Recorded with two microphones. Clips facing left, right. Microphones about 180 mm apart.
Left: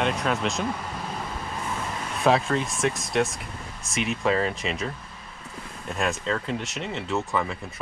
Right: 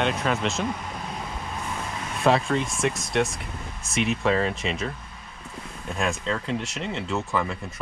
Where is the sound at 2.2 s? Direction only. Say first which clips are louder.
Even; centre (ahead or behind).